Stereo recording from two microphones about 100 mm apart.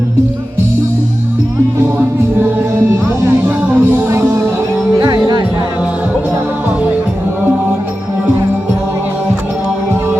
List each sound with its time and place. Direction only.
3.2 s music: 20° right (ahead or behind); by 5.5 s 40° right (ahead or behind)